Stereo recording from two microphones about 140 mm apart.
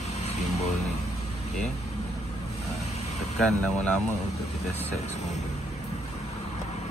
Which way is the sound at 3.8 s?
55° left (ahead or behind).